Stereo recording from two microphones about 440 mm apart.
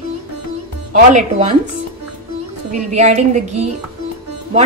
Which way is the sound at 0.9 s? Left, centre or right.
Centre.